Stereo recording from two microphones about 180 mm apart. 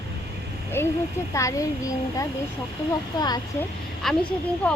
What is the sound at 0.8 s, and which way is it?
A woman's voice, 15° left (ahead or behind).